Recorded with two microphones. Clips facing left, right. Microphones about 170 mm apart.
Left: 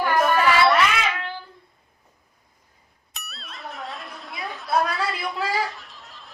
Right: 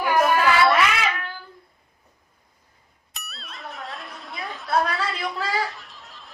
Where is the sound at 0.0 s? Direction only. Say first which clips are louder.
Right 1 dB; 5° right (ahead or behind).